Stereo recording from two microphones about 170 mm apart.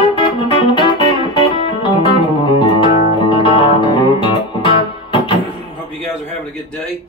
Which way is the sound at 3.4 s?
30° left (ahead or behind).